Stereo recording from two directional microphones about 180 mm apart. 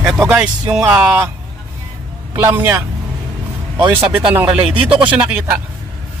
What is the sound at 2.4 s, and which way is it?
Speech, 10° right (ahead or behind).